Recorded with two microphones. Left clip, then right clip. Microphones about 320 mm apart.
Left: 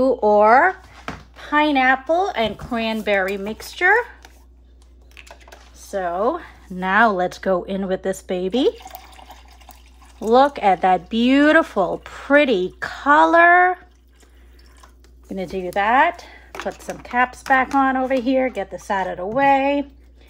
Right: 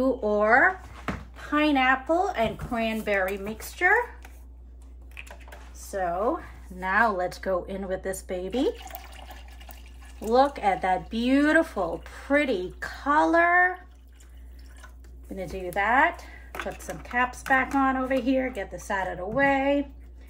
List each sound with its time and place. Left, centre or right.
0.0 s speech: left
5.9 s speech: left
10.3 s speech: left
15.6 s speech: left